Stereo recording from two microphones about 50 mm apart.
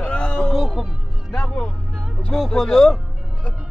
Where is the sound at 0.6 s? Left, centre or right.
Centre.